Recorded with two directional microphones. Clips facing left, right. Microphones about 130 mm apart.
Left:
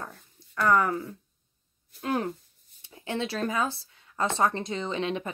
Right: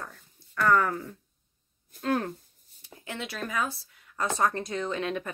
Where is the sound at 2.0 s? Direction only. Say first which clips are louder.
Right 1 dB; 15° left (ahead or behind).